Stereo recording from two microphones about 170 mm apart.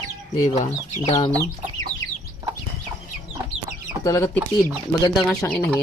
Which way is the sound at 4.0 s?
20° left (ahead or behind).